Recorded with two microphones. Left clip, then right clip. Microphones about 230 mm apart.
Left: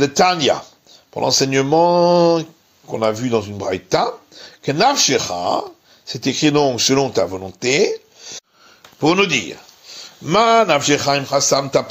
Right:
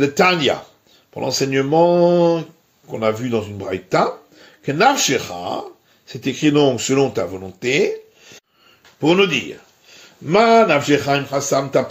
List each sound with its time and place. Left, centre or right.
0.0 s a man's voice: left